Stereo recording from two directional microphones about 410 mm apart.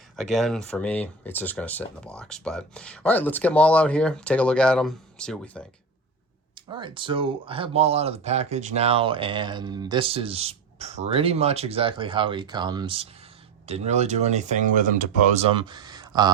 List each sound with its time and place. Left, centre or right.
0.2 s speech: centre
6.7 s speech: centre